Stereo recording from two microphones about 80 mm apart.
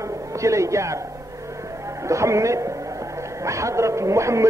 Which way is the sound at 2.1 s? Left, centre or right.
Right.